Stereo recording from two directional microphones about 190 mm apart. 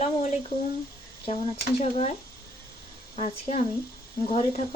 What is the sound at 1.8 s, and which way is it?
Speech, 35° left (ahead or behind).